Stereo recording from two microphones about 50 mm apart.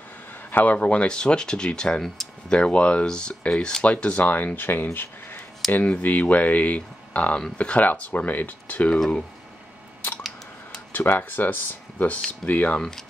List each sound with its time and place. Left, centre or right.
0.5 s speech: left; by 2.6 s centre
2.6 s speech: left
4.6 s speech: left
4.9 s a sound: left
5.7 s speech: left
8.9 s speech: centre
10.9 s speech: left